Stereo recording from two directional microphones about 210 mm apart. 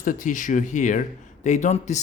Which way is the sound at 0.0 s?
40° left (ahead or behind).